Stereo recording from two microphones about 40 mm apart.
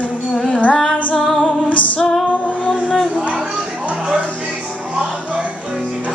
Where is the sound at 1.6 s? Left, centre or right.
Left.